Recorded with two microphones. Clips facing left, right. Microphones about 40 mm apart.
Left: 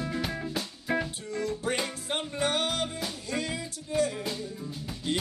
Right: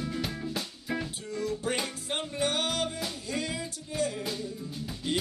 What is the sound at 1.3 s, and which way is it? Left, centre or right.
Music, centre.